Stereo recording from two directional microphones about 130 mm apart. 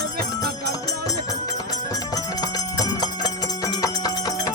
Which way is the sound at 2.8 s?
30° left (ahead or behind).